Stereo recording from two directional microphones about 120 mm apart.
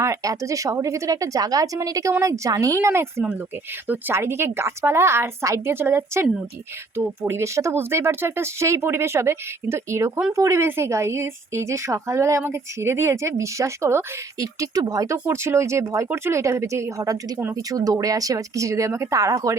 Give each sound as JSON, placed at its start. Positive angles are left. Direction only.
{"t": 0.0, "sound": "a woman's voice", "side_deg": -25}